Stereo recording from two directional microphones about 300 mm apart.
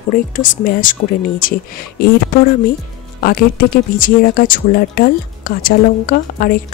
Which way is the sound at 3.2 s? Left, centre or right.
Left.